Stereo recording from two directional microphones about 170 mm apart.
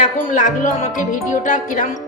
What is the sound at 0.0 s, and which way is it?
Music, 45° left (ahead or behind).